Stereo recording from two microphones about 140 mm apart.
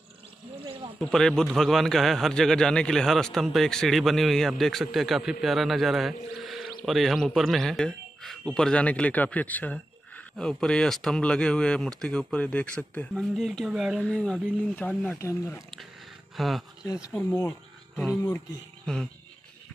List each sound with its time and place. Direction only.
0.9 s a man's voice: 5° left (ahead or behind)
6.4 s a sound: centre (ahead or behind)
6.9 s a man's voice: centre (ahead or behind)
14.0 s a man's voice: 5° left (ahead or behind)
15.1 s speech: 20° left (ahead or behind)
16.3 s a man's voice: centre (ahead or behind)
16.8 s speech: 25° left (ahead or behind)
17.9 s speech: centre (ahead or behind)